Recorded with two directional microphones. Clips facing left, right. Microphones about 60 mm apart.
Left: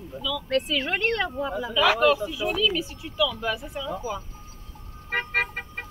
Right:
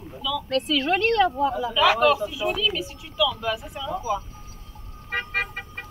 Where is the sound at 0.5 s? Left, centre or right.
Centre.